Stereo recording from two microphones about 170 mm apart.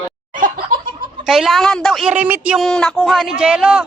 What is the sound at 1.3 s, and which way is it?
Speech, centre (ahead or behind).